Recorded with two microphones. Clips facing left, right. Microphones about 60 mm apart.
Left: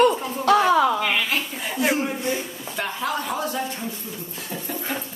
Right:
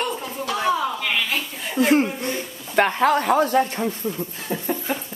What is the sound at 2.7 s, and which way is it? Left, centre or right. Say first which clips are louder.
Speech: right 9 dB; right.